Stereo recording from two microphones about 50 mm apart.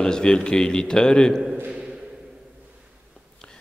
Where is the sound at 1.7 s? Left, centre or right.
Right.